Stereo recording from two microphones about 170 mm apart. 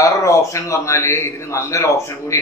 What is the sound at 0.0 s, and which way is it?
Speech, 20° left (ahead or behind).